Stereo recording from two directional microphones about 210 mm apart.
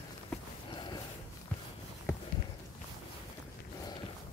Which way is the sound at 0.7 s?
20° left (ahead or behind).